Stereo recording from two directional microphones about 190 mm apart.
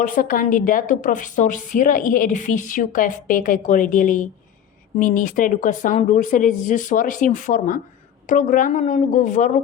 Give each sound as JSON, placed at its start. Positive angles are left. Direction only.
{"t": 0.0, "sound": "a woman's voice", "side_deg": 45}